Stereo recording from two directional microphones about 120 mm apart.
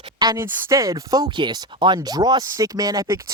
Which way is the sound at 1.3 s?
40° right (ahead or behind).